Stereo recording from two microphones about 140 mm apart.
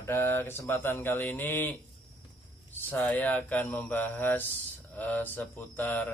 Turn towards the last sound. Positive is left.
turn(degrees=15)  # may be behind; listen again after turning